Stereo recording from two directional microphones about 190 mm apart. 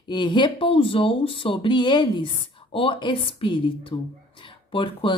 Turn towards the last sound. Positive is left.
turn(degrees=25)  # may be behind; listen again after turning